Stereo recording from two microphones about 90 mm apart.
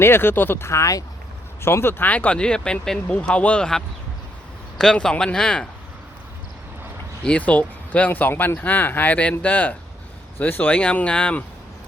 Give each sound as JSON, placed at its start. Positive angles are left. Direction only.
{"t": 0.0, "sound": "speech", "side_deg": 25}
{"t": 1.6, "sound": "speech", "side_deg": 25}
{"t": 7.3, "sound": "speech", "side_deg": 15}